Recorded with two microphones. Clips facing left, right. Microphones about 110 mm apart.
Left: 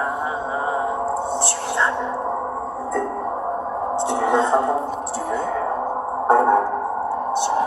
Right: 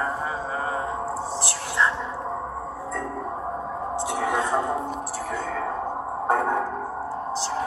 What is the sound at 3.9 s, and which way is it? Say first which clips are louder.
Music: left 6 dB; 25° left (ahead or behind).